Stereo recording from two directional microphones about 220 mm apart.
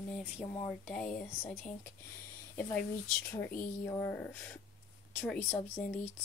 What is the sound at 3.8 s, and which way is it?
Speech, 10° left (ahead or behind).